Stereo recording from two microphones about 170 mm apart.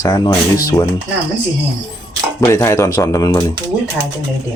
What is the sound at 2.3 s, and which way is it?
Speech, 15° left (ahead or behind).